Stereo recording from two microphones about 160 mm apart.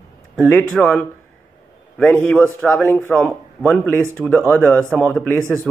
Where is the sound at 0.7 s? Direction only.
5° left (ahead or behind).